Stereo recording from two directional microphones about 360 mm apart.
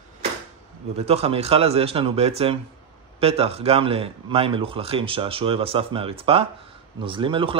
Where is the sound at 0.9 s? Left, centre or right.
Centre.